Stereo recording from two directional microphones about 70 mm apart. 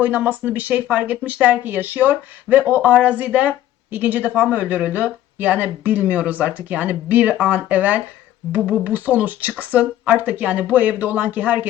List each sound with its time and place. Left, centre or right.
0.0 s speech: right